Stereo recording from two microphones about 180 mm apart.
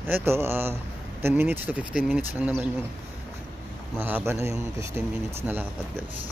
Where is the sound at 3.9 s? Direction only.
10° right (ahead or behind).